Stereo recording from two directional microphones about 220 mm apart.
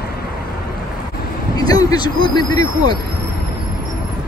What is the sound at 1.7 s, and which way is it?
Vehicle, 15° left (ahead or behind).